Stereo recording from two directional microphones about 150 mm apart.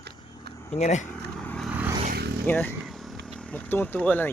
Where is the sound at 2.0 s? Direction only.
80° right.